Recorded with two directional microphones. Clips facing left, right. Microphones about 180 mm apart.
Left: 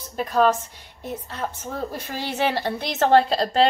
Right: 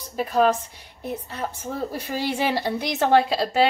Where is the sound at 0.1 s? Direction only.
10° right (ahead or behind).